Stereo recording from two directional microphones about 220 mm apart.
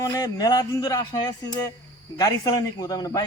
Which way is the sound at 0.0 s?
15° left (ahead or behind).